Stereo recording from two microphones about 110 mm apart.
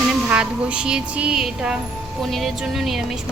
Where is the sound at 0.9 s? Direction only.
5° right (ahead or behind).